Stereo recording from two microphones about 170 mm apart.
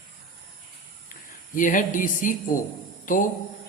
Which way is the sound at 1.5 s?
50° left (ahead or behind).